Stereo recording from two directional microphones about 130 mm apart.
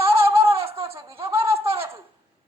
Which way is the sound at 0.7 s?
45° right (ahead or behind).